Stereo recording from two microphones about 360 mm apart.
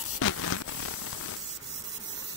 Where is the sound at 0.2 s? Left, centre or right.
Left.